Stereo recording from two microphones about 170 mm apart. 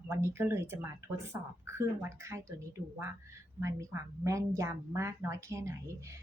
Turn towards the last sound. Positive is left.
turn(degrees=-15)  # may be behind; listen again after turning